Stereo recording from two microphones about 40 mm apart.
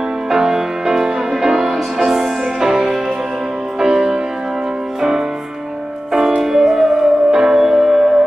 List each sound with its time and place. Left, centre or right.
0.3 s music: centre
6.3 s music: centre